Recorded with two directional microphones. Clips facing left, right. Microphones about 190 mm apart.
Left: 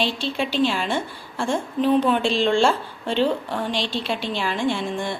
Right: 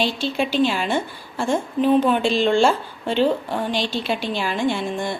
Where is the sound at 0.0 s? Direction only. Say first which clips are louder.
Right 2 dB; centre (ahead or behind).